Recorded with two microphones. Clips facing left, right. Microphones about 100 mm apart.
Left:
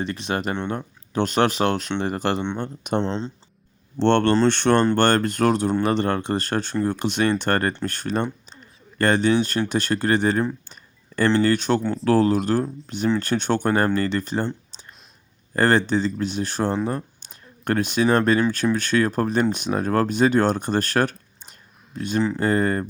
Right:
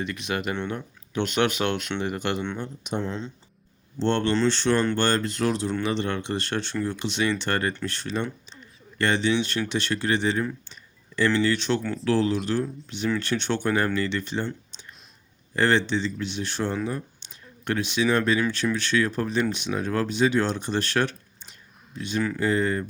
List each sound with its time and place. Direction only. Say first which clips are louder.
0.0 s speech: left 3 dB; 35° left (ahead or behind)
2.6 s speech: left 6 dB; 55° left (ahead or behind)
3.0 s speech: left 5 dB; 30° left (ahead or behind)
3.9 s speech: left 6 dB; 65° left (ahead or behind); by 10.4 s 45° left (ahead or behind)
10.7 s a sound: left 1 dB; 45° left (ahead or behind)
11.3 s speech: left 4 dB; 45° left (ahead or behind)
14.4 s clicking: left 4 dB; 35° left (ahead or behind)
15.5 s speech: left 3 dB; 45° left (ahead or behind)